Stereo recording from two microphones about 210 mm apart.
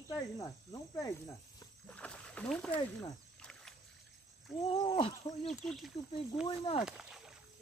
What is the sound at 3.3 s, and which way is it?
Splash, 5° left (ahead or behind).